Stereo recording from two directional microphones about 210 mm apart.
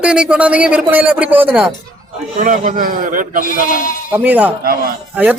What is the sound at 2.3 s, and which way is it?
A man's voice, 35° right (ahead or behind).